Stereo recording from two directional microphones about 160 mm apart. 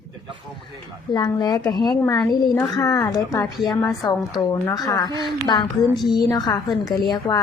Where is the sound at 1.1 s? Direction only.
25° left (ahead or behind).